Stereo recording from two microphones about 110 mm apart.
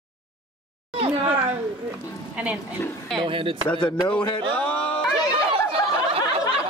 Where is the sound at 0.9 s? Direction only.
60° right (ahead or behind).